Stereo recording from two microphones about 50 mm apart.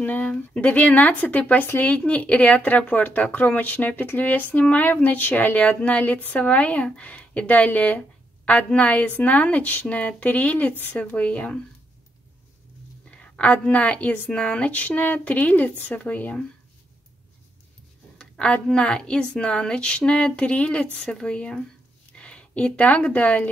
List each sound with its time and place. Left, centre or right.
0.0 s a woman's voice: left
13.1 s a woman's voice: left
14.3 s a woman's voice: left
18.2 s a woman's voice: centre